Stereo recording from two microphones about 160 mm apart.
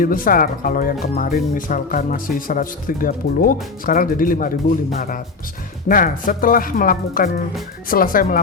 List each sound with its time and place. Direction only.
0.0 s speech: 60° left (ahead or behind)